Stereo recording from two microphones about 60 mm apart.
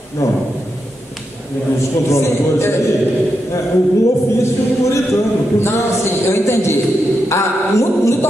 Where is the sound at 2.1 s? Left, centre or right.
Left.